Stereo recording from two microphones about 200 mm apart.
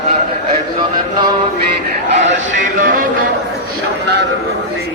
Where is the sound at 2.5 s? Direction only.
40° right (ahead or behind).